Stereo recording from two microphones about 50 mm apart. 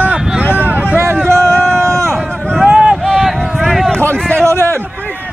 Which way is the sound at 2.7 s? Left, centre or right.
Right.